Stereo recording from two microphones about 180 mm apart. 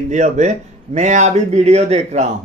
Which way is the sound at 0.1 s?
40° right (ahead or behind).